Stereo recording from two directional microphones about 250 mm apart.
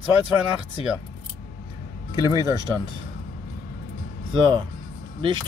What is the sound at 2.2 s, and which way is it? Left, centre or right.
Speech, centre.